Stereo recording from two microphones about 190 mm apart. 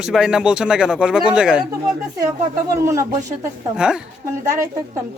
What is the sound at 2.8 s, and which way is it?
Speech, 15° right (ahead or behind).